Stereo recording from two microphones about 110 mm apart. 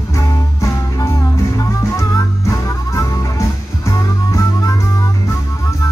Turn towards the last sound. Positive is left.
turn(degrees=30)  # may be behind; listen again after turning